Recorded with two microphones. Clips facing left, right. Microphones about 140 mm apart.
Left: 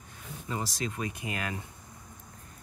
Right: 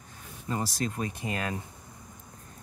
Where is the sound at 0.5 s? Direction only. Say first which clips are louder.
Right 3 dB; 45° right (ahead or behind).